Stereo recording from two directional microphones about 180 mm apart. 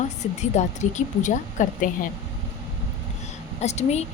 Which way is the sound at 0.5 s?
40° left (ahead or behind).